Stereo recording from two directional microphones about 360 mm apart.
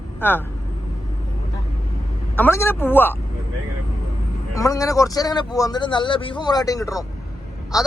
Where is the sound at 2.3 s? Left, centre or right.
Centre.